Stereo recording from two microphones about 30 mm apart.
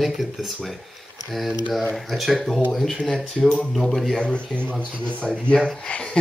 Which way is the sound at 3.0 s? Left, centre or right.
Centre.